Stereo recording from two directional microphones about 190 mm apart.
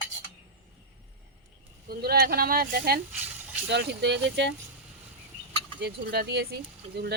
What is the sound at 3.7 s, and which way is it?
Speech, 65° right (ahead or behind).